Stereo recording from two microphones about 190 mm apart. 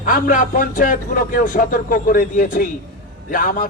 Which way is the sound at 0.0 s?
45° left (ahead or behind).